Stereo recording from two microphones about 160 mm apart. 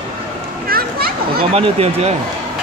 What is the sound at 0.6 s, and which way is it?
Children playing, 70° right (ahead or behind).